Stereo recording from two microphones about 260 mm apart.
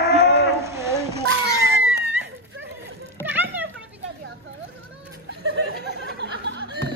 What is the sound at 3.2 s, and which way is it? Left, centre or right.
Children playing, centre.